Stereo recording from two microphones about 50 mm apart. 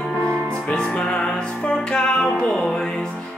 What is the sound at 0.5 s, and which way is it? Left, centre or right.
Music, centre.